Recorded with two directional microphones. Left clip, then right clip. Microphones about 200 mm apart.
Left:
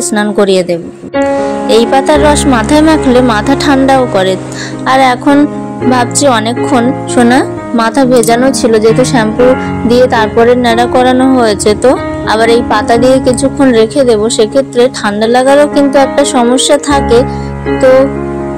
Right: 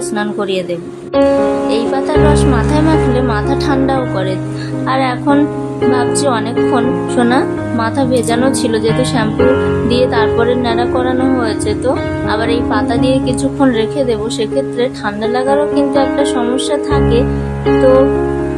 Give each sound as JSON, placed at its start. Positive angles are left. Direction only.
{"t": 0.1, "sound": "a woman's voice", "side_deg": 30}